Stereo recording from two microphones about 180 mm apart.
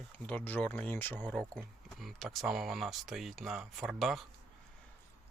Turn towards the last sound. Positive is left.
turn(degrees=0)  # may be behind; listen again after turning